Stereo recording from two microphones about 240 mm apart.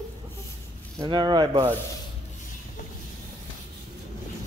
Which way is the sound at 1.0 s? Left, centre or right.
Centre.